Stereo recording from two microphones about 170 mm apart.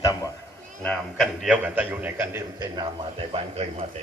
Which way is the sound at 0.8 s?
5° left (ahead or behind).